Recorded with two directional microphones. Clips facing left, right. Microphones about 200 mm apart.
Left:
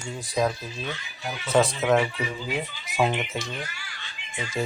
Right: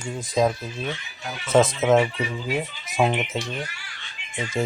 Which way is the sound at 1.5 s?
20° right (ahead or behind).